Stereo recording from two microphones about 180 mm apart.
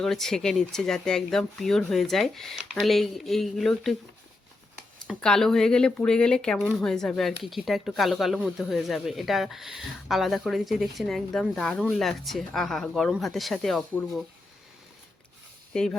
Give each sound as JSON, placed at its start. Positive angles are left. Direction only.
{"t": 0.0, "sound": "speech", "side_deg": 0}
{"t": 5.0, "sound": "speech", "side_deg": 5}
{"t": 15.7, "sound": "speech", "side_deg": 5}